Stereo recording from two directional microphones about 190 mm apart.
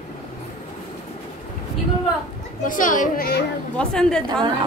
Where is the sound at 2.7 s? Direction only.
45° left (ahead or behind).